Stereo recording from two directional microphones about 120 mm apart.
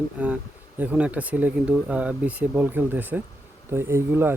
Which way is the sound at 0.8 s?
10° right (ahead or behind).